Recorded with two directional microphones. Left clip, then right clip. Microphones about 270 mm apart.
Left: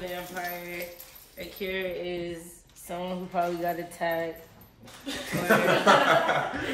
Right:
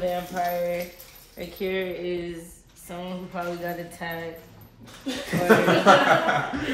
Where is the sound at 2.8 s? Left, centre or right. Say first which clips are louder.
Left 1 dB; left.